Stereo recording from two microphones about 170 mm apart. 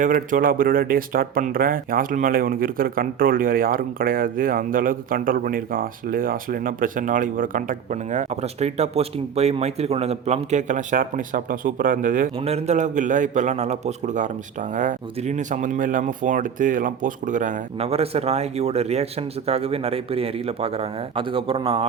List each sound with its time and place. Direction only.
0.0 s speech: 50° right (ahead or behind)
12.5 s speech: 40° right (ahead or behind)